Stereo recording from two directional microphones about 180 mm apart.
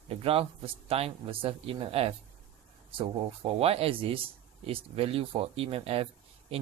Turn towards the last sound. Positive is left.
turn(degrees=-35)  # may be behind; listen again after turning